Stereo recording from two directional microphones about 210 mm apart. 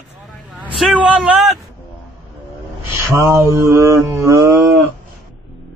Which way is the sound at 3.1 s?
15° right (ahead or behind).